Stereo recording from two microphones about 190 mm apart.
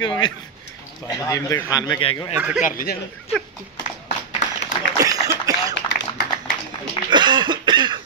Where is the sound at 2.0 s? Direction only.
30° left (ahead or behind).